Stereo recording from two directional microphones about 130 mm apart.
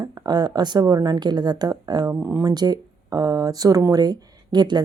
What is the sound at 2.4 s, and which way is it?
Speech, 30° right (ahead or behind).